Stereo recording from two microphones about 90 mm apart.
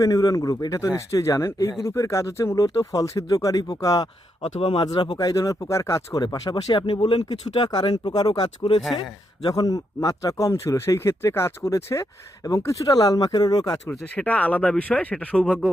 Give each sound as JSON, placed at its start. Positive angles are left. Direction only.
{"t": 0.0, "sound": "speech", "side_deg": 45}
{"t": 4.6, "sound": "speech", "side_deg": 70}
{"t": 5.1, "sound": "speech", "side_deg": 40}
{"t": 6.5, "sound": "speech", "side_deg": 60}
{"t": 14.2, "sound": "speech", "side_deg": 15}